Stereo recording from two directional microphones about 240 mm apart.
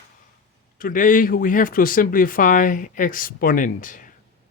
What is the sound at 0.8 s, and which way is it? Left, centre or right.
Speech, left.